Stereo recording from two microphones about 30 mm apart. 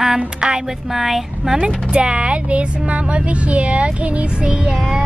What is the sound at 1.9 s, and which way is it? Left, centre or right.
Speech, right.